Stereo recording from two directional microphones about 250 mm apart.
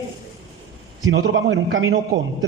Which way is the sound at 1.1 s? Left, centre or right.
Right.